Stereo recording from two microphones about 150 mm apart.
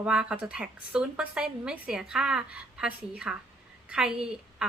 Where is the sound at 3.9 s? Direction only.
5° right (ahead or behind).